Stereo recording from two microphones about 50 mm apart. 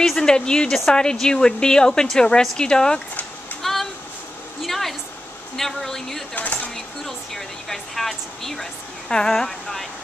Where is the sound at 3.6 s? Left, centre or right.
Centre.